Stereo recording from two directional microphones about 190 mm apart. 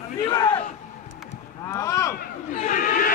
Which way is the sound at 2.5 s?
45° left (ahead or behind).